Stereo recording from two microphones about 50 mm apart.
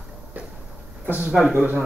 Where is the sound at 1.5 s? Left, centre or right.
Right.